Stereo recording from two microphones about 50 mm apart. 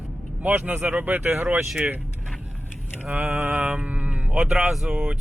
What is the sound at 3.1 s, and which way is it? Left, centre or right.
Mantra, right.